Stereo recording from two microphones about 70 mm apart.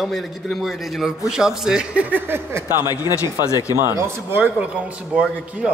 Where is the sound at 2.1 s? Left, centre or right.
Right.